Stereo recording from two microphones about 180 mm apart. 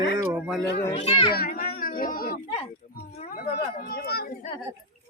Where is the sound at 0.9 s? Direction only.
30° left (ahead or behind).